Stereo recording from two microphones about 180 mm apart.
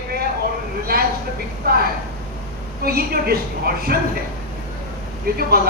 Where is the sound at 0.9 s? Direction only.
55° right (ahead or behind).